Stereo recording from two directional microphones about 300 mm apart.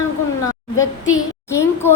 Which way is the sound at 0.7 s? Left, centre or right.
Left.